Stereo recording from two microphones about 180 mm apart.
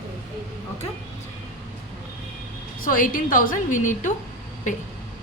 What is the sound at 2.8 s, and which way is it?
A woman's voice, 50° left (ahead or behind).